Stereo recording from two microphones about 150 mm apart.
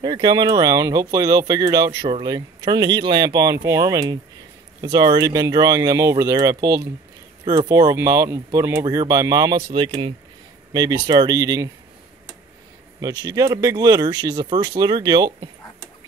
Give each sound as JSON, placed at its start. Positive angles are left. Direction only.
{"t": 0.0, "sound": "speech", "side_deg": -30}
{"t": 9.6, "sound": "speech", "side_deg": -35}
{"t": 13.0, "sound": "speech", "side_deg": -25}